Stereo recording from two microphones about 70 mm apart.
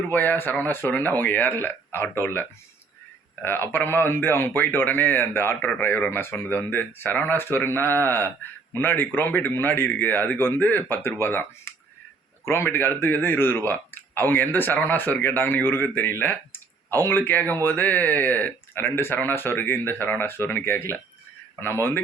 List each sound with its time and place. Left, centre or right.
0.1 s a man's voice: left
6.1 s a man's voice: left